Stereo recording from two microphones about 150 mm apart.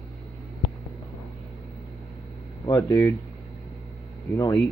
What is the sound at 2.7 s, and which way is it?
Speech, 25° left (ahead or behind).